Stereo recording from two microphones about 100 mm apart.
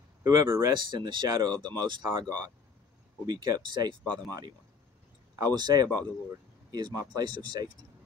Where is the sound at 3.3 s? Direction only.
45° right (ahead or behind).